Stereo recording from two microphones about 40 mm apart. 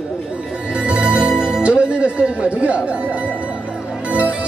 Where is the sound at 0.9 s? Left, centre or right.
Right.